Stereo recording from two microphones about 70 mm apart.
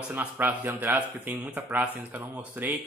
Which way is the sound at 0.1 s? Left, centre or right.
Right.